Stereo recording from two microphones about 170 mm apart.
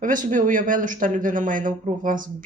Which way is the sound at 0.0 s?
50° right (ahead or behind).